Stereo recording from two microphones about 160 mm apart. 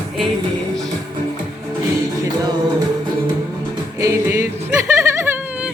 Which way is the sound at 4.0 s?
20° right (ahead or behind).